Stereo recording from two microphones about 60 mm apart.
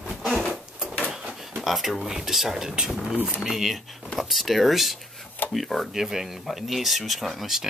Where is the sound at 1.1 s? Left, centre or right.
Centre.